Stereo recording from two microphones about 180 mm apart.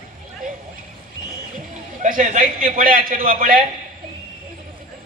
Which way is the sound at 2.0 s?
50° right (ahead or behind).